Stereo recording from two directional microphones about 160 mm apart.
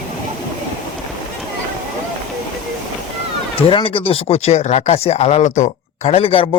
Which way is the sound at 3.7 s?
35° left (ahead or behind).